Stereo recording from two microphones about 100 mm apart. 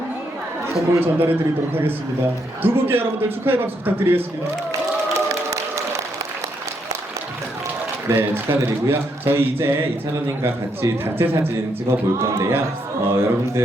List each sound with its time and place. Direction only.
1.0 s a man's voice: 20° right (ahead or behind)
4.7 s a sound: 30° right (ahead or behind)
8.0 s a man's voice: 25° right (ahead or behind)